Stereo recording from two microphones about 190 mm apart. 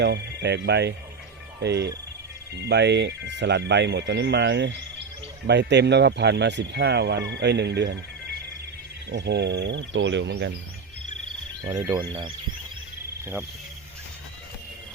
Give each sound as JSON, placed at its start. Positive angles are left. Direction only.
{"t": 0.0, "sound": "speech", "side_deg": -60}
{"t": 11.6, "sound": "speech", "side_deg": -20}